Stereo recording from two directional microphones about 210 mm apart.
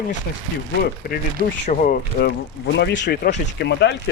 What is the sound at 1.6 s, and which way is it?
Speech, 40° left (ahead or behind).